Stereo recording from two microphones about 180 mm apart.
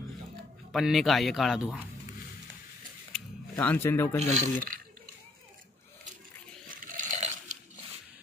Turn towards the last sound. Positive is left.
turn(degrees=-45)  # may be behind; listen again after turning